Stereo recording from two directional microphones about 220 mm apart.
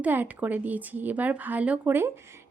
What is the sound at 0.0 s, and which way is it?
Speech, 10° right (ahead or behind).